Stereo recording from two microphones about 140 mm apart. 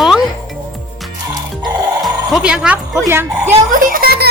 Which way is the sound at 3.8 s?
85° right.